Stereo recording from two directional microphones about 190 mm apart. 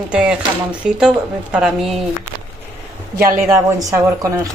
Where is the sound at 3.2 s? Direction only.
15° right (ahead or behind).